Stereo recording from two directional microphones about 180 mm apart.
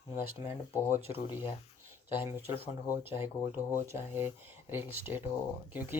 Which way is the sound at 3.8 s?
15° right (ahead or behind).